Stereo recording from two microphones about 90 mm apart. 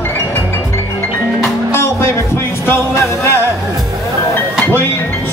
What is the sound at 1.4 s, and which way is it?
Music, 30° left (ahead or behind).